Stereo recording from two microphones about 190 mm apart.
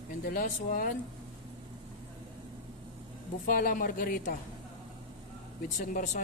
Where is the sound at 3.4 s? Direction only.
45° left (ahead or behind).